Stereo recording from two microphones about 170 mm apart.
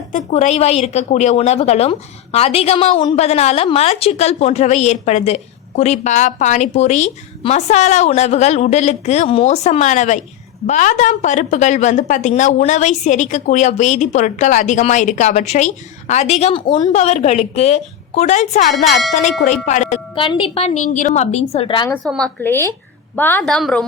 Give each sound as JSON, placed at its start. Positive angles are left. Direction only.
{"t": 0.1, "sound": "a woman's voice", "side_deg": 45}
{"t": 20.1, "sound": "a woman's voice", "side_deg": 30}
{"t": 22.0, "sound": "a woman's voice", "side_deg": 0}